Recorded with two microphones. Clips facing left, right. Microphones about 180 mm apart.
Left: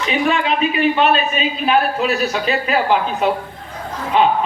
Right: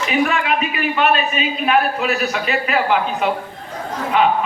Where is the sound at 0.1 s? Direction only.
25° left (ahead or behind).